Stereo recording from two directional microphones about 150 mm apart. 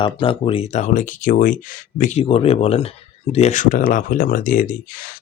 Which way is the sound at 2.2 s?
40° left (ahead or behind).